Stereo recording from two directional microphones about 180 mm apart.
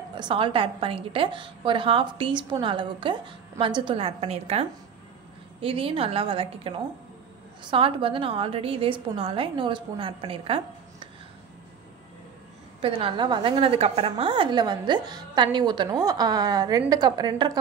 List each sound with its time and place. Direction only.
0.2 s a woman's voice: 30° right (ahead or behind)
7.7 s a woman's voice: 30° right (ahead or behind)
12.8 s a woman's voice: 30° right (ahead or behind)